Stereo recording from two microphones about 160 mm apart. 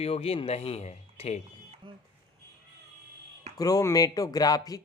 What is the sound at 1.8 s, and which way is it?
Speech, 30° right (ahead or behind).